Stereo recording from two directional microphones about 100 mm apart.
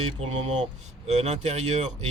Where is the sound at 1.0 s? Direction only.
90° right.